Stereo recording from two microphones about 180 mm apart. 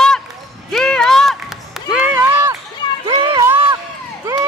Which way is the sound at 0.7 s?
5° left (ahead or behind).